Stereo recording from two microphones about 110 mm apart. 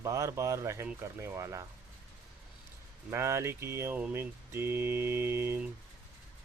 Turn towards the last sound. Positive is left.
turn(degrees=-25)  # may be behind; listen again after turning